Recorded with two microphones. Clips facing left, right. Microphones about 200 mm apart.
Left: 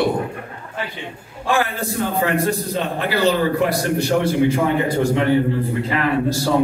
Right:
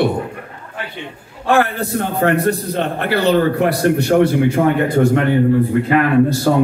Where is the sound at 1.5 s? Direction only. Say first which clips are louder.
Right 5 dB; 60° right (ahead or behind).